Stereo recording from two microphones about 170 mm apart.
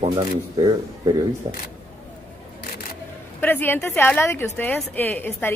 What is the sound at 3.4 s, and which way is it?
A woman's voice, 10° left (ahead or behind).